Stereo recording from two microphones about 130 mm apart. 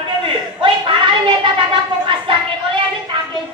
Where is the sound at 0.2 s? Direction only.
40° right (ahead or behind).